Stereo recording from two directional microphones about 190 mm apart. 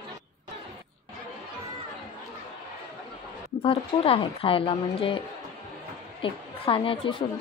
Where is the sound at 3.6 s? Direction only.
30° left (ahead or behind).